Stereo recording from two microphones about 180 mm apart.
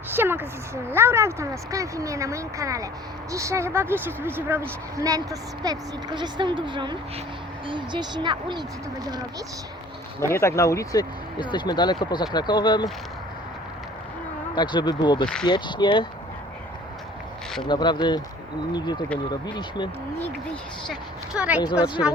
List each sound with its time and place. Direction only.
0.1 s a sound: 10° right (ahead or behind)
0.9 s a woman's voice: 15° right (ahead or behind)
10.2 s speech: 15° left (ahead or behind)
14.5 s speech: 25° left (ahead or behind)
17.7 s speech: 25° left (ahead or behind)
20.8 s a woman's voice: 5° right (ahead or behind)
21.6 s speech: 25° left (ahead or behind)